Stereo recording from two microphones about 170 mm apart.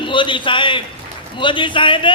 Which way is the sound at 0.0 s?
30° left (ahead or behind).